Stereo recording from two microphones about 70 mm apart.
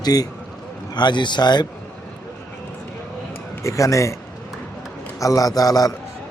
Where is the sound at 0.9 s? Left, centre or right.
Left.